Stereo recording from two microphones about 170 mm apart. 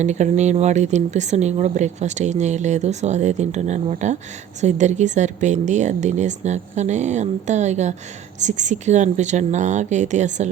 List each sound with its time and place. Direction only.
0.0 s speech: 45° right (ahead or behind)